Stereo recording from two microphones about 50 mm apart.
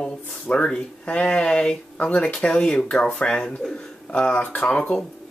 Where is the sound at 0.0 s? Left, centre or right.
Centre.